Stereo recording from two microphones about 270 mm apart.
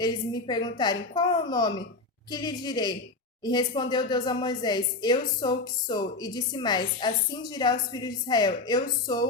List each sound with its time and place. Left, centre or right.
0.0 s speech: centre